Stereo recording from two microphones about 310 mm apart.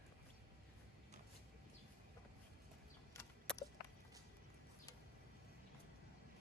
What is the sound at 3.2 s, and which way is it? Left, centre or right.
Clip-clop, centre.